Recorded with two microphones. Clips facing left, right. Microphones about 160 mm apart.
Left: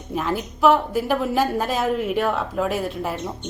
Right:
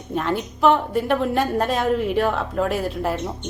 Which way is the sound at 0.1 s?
Centre (ahead or behind).